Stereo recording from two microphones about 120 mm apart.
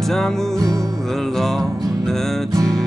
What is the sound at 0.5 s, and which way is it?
Music, 30° right (ahead or behind).